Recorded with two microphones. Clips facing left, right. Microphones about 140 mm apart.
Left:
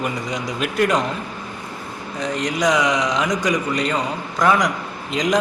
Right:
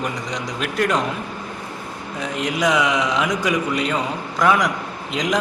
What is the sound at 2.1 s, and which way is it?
A man's voice, 5° right (ahead or behind).